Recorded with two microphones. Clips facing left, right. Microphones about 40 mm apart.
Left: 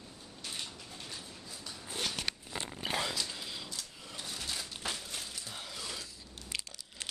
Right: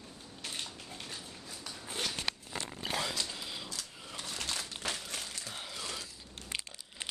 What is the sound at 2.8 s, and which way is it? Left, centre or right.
Zipper, centre.